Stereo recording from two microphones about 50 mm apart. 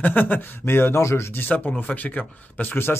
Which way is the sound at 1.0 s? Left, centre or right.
Left.